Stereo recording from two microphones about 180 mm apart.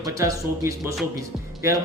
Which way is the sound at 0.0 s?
20° right (ahead or behind).